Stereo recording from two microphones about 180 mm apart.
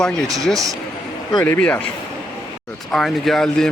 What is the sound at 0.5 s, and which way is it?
Speech, 20° right (ahead or behind).